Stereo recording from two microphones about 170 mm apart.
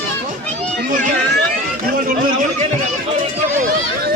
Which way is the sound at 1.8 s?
55° right (ahead or behind).